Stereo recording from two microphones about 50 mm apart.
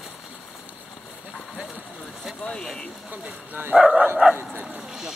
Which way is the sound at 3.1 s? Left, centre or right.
Right.